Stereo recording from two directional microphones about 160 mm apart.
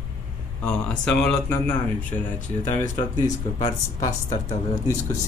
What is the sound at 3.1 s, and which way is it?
Speech, 25° left (ahead or behind).